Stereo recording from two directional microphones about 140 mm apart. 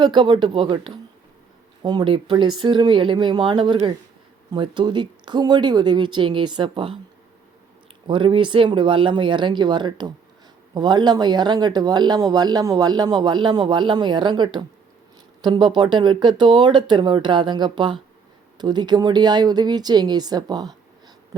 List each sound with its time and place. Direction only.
0.0 s speech: 35° right (ahead or behind)
8.0 s speech: 35° right (ahead or behind)